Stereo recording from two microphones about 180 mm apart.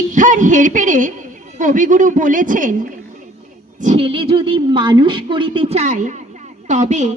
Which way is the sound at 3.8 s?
40° right (ahead or behind).